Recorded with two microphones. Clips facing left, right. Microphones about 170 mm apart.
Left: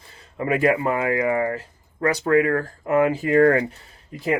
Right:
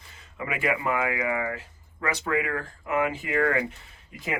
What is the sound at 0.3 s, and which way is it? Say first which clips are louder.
Speech: left 8 dB; 40° left (ahead or behind).